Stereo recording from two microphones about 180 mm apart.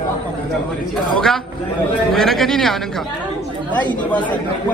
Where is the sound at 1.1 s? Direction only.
Centre (ahead or behind).